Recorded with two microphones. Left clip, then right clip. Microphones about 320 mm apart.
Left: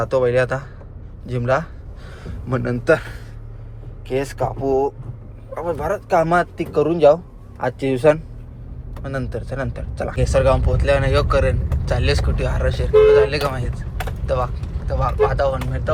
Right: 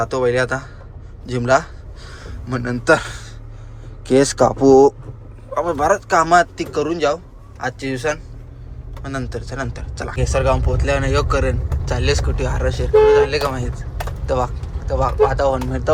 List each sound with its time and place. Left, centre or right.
0.0 s a man's voice: centre
4.4 s speech: centre
5.5 s speech: centre